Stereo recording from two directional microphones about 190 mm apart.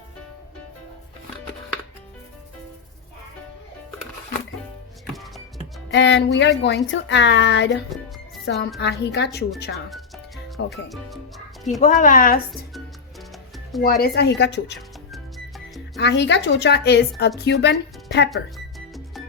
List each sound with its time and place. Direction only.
5.9 s a woman's voice: 70° left (ahead or behind)
9.7 s music: centre (ahead or behind)
10.8 s speech: centre (ahead or behind)
11.8 s speech: 45° left (ahead or behind)
13.8 s a woman's voice: 55° left (ahead or behind)
14.8 s music: centre (ahead or behind)
16.0 s a woman's voice: 65° left (ahead or behind)
18.3 s music: centre (ahead or behind)